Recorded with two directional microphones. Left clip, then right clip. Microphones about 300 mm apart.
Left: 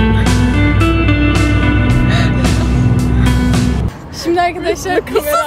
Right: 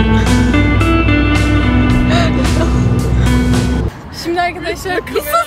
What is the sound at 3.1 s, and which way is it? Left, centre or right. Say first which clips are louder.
Music: right 1 dB; centre.